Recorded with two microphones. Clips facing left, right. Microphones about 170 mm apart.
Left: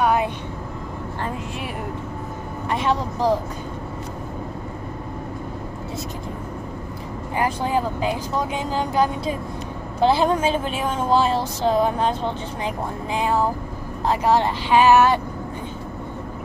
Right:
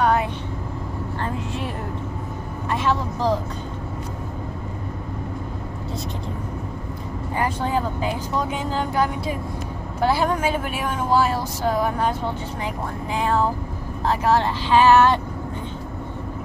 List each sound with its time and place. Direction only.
0.0 s vehicle: 10° left (ahead or behind)
2.7 s speech: 15° left (ahead or behind)
7.3 s speech: 15° left (ahead or behind)